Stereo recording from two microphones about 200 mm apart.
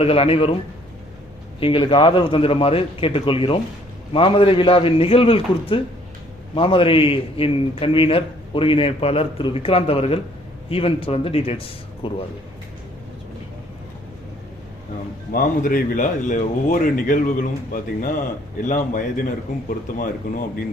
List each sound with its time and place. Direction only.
0.0 s a man's voice: 30° left (ahead or behind)
1.5 s a man's voice: 25° left (ahead or behind)
15.3 s a man's voice: 45° left (ahead or behind)